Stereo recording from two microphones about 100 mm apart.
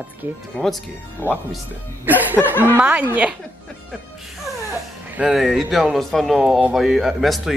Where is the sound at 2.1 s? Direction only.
20° right (ahead or behind).